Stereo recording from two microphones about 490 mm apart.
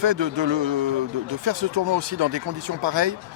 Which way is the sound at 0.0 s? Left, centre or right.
Right.